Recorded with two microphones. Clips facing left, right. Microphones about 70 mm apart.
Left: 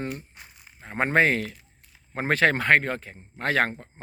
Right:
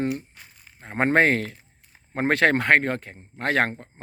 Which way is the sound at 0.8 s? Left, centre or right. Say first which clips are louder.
Right 2 dB; right.